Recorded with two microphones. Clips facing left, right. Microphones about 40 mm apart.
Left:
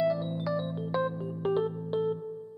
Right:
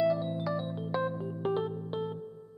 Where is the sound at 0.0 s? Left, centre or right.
Centre.